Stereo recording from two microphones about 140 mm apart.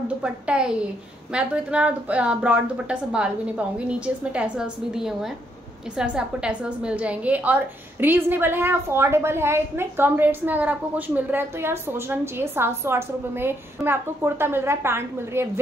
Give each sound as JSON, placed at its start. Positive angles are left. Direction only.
{"t": 0.2, "sound": "a woman's voice", "side_deg": -5}